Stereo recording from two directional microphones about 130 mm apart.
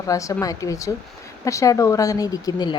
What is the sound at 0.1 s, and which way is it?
Speech, 25° left (ahead or behind).